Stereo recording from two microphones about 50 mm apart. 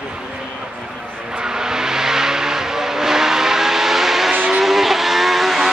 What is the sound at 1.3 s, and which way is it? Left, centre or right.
Vehicle, centre.